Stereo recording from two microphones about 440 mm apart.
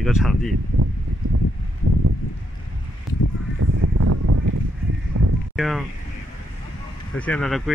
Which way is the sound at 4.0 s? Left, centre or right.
Right.